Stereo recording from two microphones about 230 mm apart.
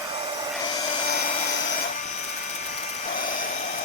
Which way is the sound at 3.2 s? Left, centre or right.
Left.